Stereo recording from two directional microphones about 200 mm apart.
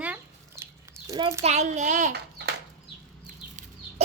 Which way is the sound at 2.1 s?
55° right (ahead or behind).